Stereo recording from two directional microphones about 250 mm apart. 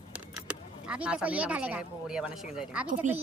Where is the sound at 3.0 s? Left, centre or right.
Right.